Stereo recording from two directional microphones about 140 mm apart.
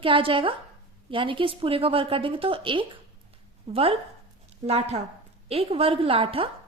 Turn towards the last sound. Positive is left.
turn(degrees=-40)  # may be behind; listen again after turning